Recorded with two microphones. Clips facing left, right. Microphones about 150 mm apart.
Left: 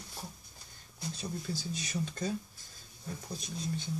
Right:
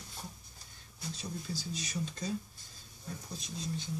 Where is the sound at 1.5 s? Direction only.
55° left (ahead or behind).